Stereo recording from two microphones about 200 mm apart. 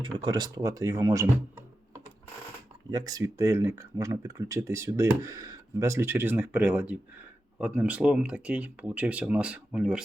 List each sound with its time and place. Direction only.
0.0 s speech: 25° right (ahead or behind); by 10.0 s 5° right (ahead or behind)